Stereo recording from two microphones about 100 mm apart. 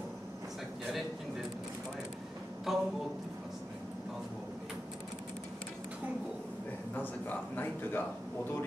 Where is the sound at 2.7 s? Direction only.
Centre (ahead or behind).